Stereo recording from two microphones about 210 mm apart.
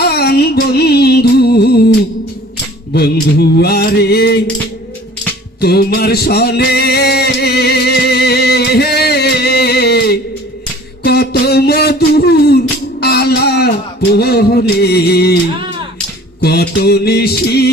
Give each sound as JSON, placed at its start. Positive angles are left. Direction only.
{"t": 0.0, "sound": "music", "side_deg": 50}
{"t": 2.9, "sound": "mantra", "side_deg": 50}
{"t": 5.5, "sound": "music", "side_deg": 50}
{"t": 11.0, "sound": "a sound", "side_deg": 50}
{"t": 13.0, "sound": "music", "side_deg": 50}
{"t": 14.2, "sound": "mantra", "side_deg": 50}
{"t": 16.4, "sound": "mantra", "side_deg": 50}